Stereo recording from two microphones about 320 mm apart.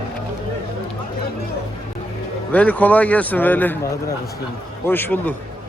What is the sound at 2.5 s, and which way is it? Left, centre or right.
Speech, centre.